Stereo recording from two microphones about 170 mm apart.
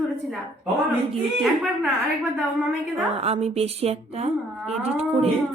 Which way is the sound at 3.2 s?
35° right (ahead or behind).